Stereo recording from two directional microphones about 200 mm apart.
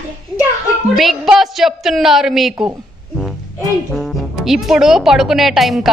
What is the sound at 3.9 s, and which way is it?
A woman's voice, centre (ahead or behind).